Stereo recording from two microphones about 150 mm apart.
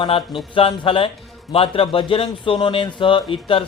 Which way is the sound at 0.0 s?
35° left (ahead or behind).